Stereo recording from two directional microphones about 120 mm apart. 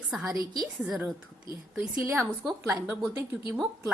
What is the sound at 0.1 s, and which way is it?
A woman's voice, 5° right (ahead or behind).